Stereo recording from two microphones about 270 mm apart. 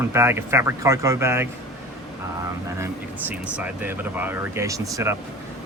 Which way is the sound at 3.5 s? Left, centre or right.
Centre.